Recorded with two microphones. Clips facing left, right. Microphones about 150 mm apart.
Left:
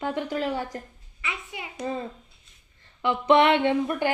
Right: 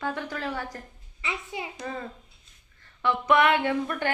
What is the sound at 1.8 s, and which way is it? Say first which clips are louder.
A woman's voice: left 4 dB; 25° left (ahead or behind).